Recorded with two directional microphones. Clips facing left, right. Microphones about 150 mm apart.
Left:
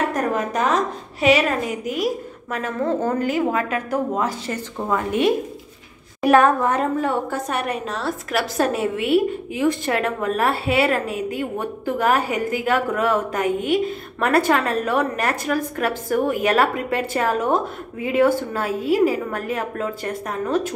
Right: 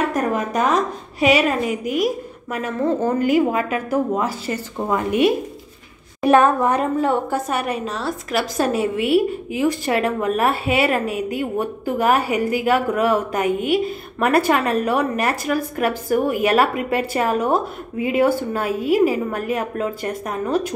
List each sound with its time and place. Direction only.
0.1 s a woman's voice: 10° right (ahead or behind)
2.5 s a woman's voice: 10° right (ahead or behind)
7.4 s a woman's voice: 5° right (ahead or behind)